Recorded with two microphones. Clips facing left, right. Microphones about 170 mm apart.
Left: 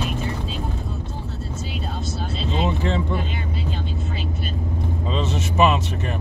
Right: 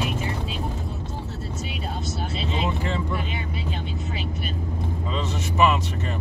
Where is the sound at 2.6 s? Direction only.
25° left (ahead or behind).